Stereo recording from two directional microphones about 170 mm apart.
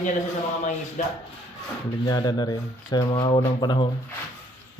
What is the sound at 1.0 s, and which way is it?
Speech, 50° left (ahead or behind).